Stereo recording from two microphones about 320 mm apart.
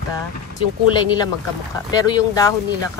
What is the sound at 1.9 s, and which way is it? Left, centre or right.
Speech, centre.